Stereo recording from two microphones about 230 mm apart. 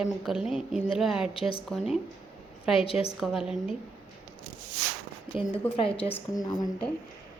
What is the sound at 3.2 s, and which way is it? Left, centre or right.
Speech, centre.